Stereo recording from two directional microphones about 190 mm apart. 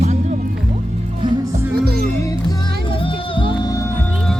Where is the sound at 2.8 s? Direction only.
30° left (ahead or behind).